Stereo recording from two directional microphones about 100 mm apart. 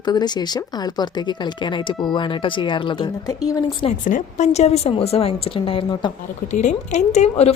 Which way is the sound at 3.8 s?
90° left.